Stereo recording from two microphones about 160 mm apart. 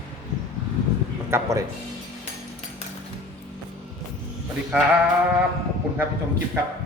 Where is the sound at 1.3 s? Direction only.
20° right (ahead or behind).